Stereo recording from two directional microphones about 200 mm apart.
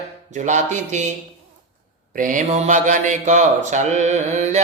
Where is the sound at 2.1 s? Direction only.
40° right (ahead or behind).